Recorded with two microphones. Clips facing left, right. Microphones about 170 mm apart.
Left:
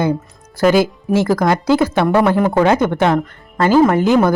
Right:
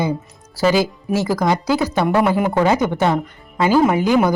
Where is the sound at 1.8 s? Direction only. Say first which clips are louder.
Left 3 dB; 5° right (ahead or behind).